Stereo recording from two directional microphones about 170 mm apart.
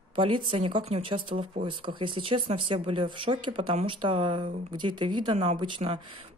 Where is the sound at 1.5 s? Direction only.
50° right (ahead or behind).